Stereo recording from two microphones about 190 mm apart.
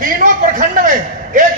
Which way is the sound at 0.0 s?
45° right (ahead or behind).